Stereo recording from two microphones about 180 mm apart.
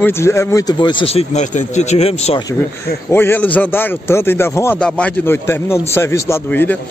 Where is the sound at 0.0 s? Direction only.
15° left (ahead or behind); by 2.4 s 35° left (ahead or behind).